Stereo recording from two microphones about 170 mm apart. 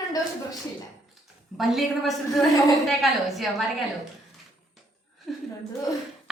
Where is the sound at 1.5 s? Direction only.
Centre (ahead or behind).